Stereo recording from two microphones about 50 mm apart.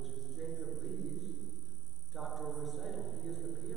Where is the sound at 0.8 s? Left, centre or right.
Centre.